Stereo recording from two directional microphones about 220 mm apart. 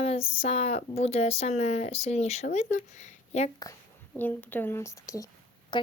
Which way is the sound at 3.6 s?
10° left (ahead or behind).